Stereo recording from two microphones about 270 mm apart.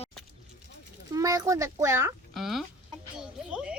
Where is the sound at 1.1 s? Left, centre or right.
Centre.